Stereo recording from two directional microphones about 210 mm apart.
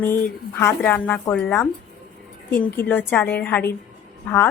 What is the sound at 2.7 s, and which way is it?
A woman's voice, 10° left (ahead or behind).